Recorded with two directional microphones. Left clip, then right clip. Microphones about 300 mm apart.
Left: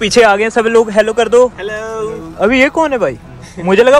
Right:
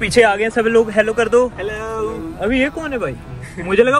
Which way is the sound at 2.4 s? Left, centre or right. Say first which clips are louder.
Left 9 dB; left.